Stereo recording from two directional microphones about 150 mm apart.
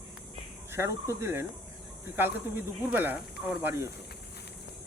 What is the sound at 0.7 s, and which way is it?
Speech, 20° right (ahead or behind).